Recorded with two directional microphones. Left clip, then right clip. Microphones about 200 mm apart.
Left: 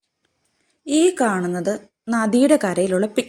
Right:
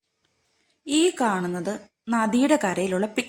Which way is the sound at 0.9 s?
10° left (ahead or behind).